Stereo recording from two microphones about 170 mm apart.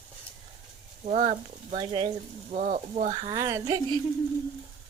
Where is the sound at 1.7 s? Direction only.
30° right (ahead or behind).